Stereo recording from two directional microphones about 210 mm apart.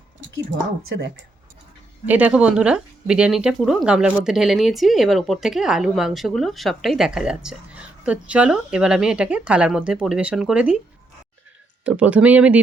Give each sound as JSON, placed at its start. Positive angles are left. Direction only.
{"t": 0.9, "sound": "speech", "side_deg": -55}
{"t": 2.0, "sound": "speech", "side_deg": -5}
{"t": 11.9, "sound": "speech", "side_deg": -5}